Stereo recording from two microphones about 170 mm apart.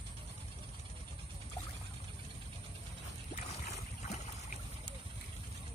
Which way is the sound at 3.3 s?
40° left (ahead or behind).